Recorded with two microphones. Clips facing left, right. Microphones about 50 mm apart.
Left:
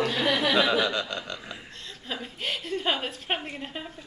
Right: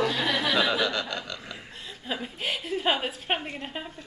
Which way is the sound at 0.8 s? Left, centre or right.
Centre.